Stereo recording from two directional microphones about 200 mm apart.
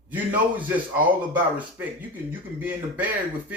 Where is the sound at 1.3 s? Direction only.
10° right (ahead or behind).